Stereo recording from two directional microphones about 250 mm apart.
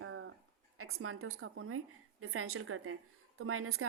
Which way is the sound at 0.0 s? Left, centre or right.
Right.